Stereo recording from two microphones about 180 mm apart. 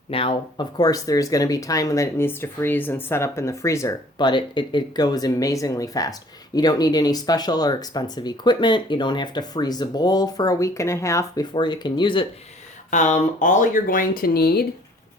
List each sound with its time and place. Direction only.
0.1 s speech: 30° left (ahead or behind)
12.9 s speech: 40° left (ahead or behind); by 14.7 s 60° left (ahead or behind)